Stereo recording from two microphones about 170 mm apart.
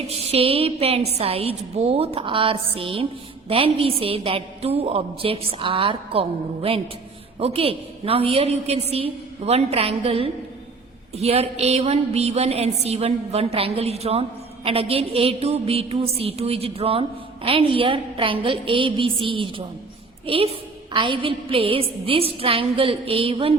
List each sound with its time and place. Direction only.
0.3 s a woman's voice: 35° right (ahead or behind)